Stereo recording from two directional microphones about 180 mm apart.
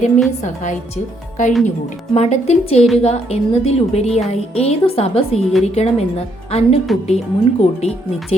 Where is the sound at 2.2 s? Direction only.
35° left (ahead or behind).